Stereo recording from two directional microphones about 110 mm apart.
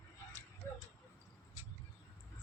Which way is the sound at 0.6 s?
25° left (ahead or behind).